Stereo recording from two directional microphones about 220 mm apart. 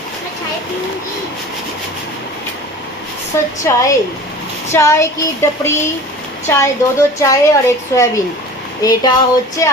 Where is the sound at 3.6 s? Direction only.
15° left (ahead or behind).